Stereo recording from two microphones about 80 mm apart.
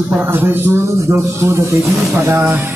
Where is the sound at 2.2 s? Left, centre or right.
Right.